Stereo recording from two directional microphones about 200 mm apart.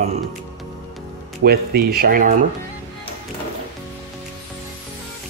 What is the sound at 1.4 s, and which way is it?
Speech, 50° right (ahead or behind).